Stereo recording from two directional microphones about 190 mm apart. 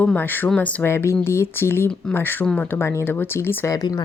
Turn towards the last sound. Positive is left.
turn(degrees=20)  # may be behind; listen again after turning